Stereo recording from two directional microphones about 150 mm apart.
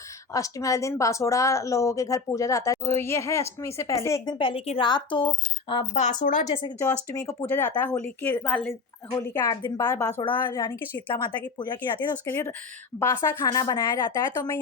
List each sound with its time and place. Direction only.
0.3 s speech: 20° left (ahead or behind)
4.4 s a woman's voice: 35° left (ahead or behind)
5.9 s speech: 55° left (ahead or behind)
7.3 s speech: 15° left (ahead or behind)
9.2 s speech: 25° left (ahead or behind)
11.9 s speech: 15° left (ahead or behind)